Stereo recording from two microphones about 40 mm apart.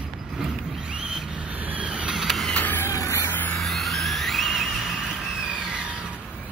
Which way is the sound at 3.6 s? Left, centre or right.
Centre.